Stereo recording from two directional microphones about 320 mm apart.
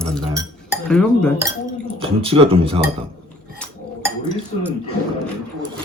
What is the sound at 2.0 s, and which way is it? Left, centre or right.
Speech, centre.